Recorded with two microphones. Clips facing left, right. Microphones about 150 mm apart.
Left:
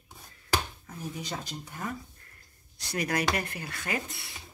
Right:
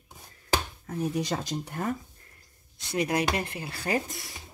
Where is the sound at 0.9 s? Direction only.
75° right (ahead or behind).